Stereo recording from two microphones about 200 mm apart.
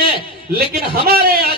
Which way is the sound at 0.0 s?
50° right (ahead or behind).